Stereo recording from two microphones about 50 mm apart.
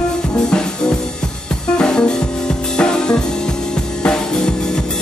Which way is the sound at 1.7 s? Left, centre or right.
Centre.